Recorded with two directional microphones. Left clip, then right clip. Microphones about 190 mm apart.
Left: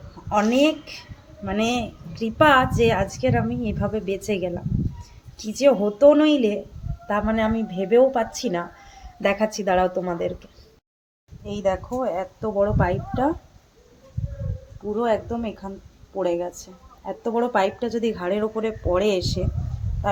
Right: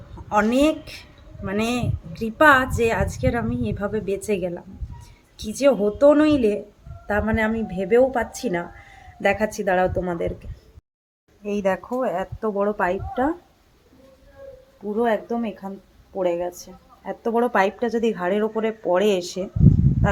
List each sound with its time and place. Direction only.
0.3 s a woman's voice: 10° right (ahead or behind)
11.6 s a woman's voice: 15° right (ahead or behind)
14.9 s a woman's voice: 10° right (ahead or behind)